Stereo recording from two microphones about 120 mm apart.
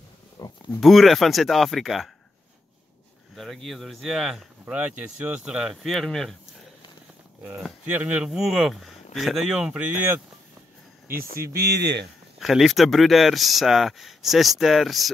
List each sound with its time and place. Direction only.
0.4 s a sound: 35° left (ahead or behind)
0.7 s speech: centre (ahead or behind)
3.3 s speech: centre (ahead or behind)
7.8 s speech: 10° right (ahead or behind)
12.4 s speech: centre (ahead or behind)